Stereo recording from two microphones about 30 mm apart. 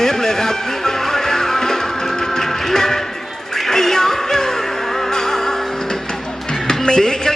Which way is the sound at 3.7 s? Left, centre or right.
Centre.